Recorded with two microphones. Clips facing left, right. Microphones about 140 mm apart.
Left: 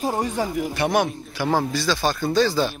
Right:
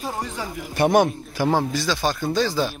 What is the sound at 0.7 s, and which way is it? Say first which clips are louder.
Speech: right 5 dB; 50° right (ahead or behind).